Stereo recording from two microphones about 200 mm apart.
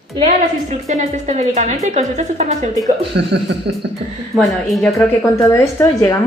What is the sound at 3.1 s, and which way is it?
Speech, 55° right (ahead or behind).